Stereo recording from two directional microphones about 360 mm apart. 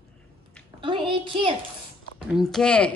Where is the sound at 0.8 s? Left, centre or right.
Centre.